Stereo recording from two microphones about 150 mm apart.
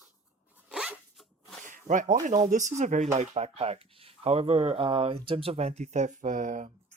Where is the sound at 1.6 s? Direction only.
60° right (ahead or behind).